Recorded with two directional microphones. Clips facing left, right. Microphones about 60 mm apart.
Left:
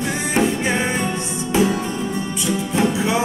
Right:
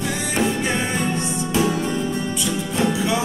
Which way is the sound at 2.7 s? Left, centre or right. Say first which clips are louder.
Left 1 dB; left.